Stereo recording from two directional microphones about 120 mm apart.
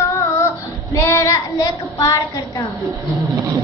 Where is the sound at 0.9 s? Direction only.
25° left (ahead or behind).